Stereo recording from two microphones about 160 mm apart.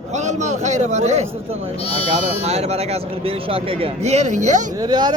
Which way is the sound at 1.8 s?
35° left (ahead or behind).